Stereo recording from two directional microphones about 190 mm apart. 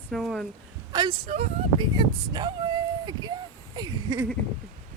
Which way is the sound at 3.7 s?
20° right (ahead or behind).